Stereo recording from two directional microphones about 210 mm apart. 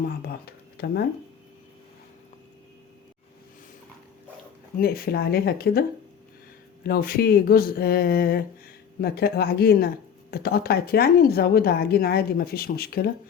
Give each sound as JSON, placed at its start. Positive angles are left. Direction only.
{"t": 0.3, "sound": "speech", "side_deg": 50}
{"t": 4.8, "sound": "speech", "side_deg": 45}
{"t": 6.8, "sound": "speech", "side_deg": 45}